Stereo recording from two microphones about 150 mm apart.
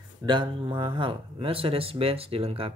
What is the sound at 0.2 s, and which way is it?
Speech, 30° right (ahead or behind).